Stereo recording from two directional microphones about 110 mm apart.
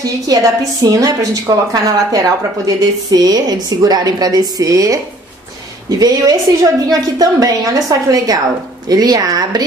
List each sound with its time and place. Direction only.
0.0 s a woman's voice: 35° right (ahead or behind)